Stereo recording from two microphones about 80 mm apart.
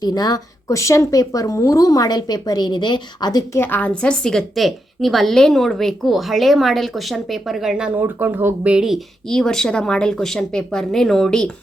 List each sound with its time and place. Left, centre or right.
0.0 s speech: left
3.6 s a woman's voice: left; by 7.9 s centre
8.0 s speech: right
8.7 s speech: centre
9.3 s speech: centre